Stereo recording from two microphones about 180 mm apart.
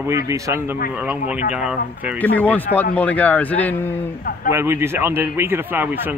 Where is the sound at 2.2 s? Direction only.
10° left (ahead or behind).